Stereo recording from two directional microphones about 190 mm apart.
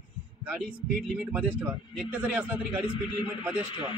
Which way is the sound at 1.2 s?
10° right (ahead or behind).